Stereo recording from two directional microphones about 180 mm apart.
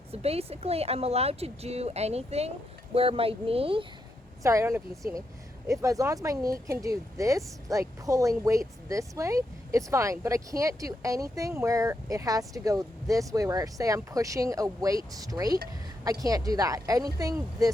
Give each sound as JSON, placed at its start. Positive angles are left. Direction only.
{"t": 0.1, "sound": "speech", "side_deg": -35}
{"t": 4.4, "sound": "speech", "side_deg": -15}